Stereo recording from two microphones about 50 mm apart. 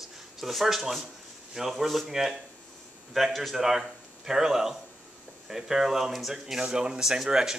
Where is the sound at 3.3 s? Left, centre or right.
Centre.